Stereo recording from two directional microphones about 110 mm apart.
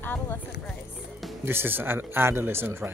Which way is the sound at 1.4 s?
20° right (ahead or behind).